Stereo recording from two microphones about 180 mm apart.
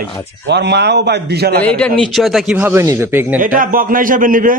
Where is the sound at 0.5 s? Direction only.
70° right (ahead or behind).